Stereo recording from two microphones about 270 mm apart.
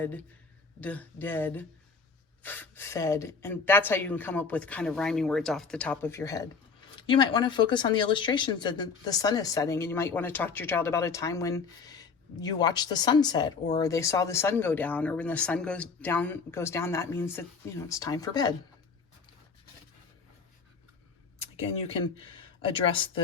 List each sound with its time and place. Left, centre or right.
0.0 s speech: centre
21.3 s speech: left